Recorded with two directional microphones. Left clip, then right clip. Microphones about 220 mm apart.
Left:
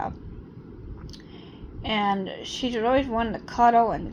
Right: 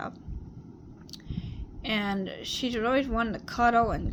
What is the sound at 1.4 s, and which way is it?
A woman's voice, 20° right (ahead or behind).